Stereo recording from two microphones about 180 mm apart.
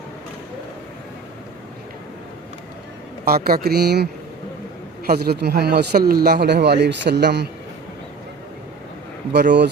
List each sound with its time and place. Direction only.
3.2 s a man's voice: 55° right (ahead or behind)
9.3 s speech: 70° right (ahead or behind)